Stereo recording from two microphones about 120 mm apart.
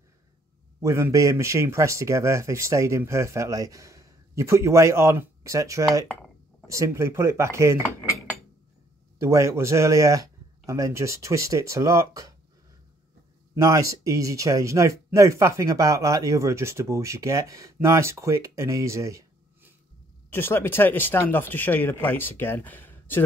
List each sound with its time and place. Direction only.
0.7 s speech: 20° right (ahead or behind)
9.2 s speech: 25° right (ahead or behind)
13.6 s speech: 25° right (ahead or behind)
20.2 s speech: 20° left (ahead or behind)